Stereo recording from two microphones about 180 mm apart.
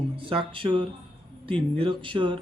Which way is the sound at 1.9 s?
25° right (ahead or behind).